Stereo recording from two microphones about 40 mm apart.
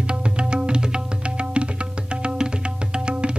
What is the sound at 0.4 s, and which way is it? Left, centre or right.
Music, right.